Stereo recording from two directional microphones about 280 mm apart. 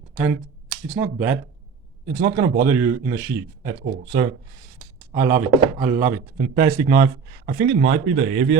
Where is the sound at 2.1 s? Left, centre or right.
Right.